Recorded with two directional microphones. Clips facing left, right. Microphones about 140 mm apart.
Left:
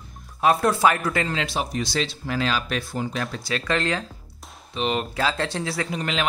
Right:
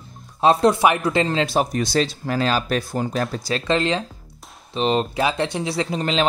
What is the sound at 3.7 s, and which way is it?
Speech, 20° right (ahead or behind).